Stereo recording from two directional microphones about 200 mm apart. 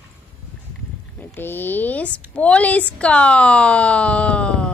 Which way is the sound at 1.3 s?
10° left (ahead or behind).